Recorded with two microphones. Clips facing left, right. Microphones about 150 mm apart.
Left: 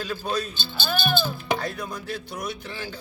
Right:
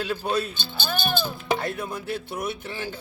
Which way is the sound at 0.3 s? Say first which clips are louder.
Right 2 dB; 20° right (ahead or behind).